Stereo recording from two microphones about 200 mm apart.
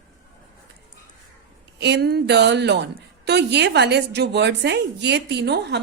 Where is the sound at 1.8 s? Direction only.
60° right (ahead or behind).